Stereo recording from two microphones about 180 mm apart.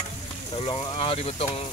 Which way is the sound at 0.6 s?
30° left (ahead or behind).